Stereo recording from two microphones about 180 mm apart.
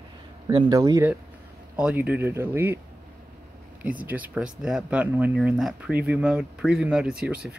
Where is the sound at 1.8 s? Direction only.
5° right (ahead or behind).